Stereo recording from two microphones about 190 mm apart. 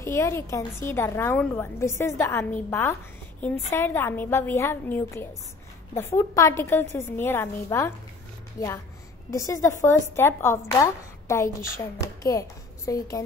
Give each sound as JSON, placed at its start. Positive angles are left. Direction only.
{"t": 0.0, "sound": "a woman's voice", "side_deg": 15}